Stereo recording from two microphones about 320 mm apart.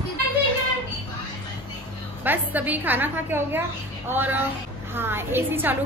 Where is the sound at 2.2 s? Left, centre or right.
Centre.